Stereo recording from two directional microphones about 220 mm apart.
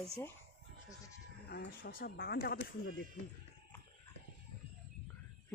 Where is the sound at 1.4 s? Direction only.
45° left (ahead or behind).